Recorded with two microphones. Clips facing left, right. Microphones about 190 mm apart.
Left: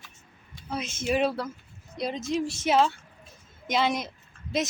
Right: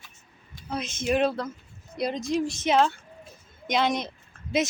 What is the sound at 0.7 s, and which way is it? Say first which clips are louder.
Speech: right 2 dB; 5° left (ahead or behind).